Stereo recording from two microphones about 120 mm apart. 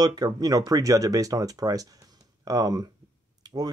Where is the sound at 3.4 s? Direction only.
35° right (ahead or behind).